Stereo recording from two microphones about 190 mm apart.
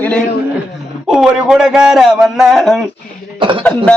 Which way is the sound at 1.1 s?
Centre (ahead or behind).